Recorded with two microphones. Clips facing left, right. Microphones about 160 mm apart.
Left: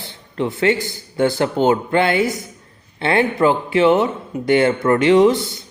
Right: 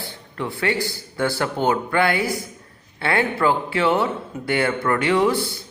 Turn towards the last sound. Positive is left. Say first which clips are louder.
# left 6 dB
turn(degrees=20)  # may be behind; listen again after turning